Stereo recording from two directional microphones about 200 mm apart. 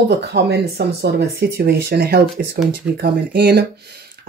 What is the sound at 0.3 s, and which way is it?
Speech, 55° right (ahead or behind).